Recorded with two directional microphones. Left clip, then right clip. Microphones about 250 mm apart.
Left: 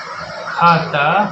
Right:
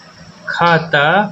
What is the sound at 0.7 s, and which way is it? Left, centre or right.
Speech, right.